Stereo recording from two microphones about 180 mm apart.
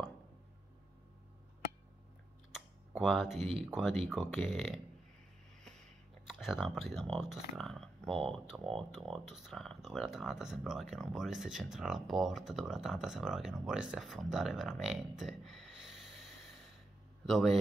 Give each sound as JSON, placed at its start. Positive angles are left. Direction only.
{"t": 2.5, "sound": "speech", "side_deg": 0}
{"t": 6.2, "sound": "speech", "side_deg": 0}
{"t": 17.3, "sound": "speech", "side_deg": 0}